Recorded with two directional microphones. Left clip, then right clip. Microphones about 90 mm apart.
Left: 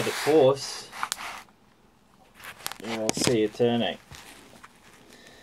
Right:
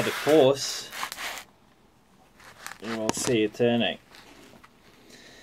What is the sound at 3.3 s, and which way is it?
Speech, 20° right (ahead or behind).